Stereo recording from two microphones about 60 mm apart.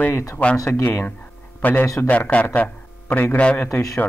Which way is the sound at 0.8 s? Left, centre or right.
Left.